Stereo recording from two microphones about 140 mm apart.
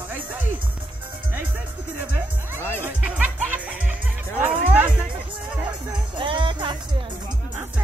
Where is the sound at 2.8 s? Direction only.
10° right (ahead or behind).